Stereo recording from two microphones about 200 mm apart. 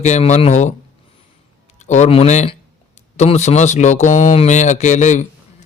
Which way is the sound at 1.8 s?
35° left (ahead or behind).